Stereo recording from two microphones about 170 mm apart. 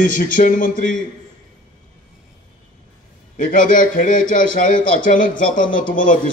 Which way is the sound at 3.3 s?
50° left (ahead or behind).